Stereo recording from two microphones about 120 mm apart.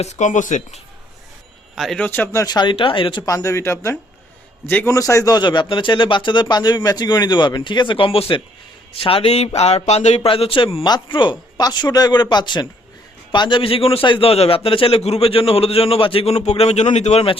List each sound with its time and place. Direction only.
0.0 s speech: 80° left
1.7 s speech: centre (ahead or behind)
2.0 s speech: 15° left (ahead or behind); by 3.2 s 45° left (ahead or behind)
3.2 s a man's voice: 25° left (ahead or behind)
4.9 s speech: 25° left (ahead or behind); by 10.2 s 70° left (ahead or behind)
10.2 s a man's voice: 50° left (ahead or behind)
10.8 s a man's voice: 40° left (ahead or behind); by 17.2 s 65° left (ahead or behind)